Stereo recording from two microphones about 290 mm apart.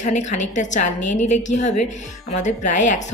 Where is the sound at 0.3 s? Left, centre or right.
Left.